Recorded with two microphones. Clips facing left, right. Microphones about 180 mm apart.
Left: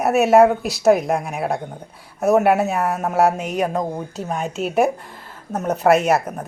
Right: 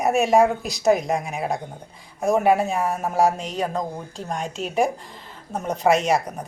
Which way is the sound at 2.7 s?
70° left (ahead or behind).